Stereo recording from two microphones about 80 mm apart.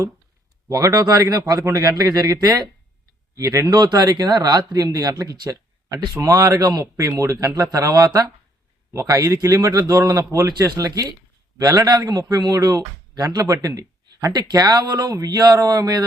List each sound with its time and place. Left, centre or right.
1.0 s a man's voice: right
3.9 s a man's voice: right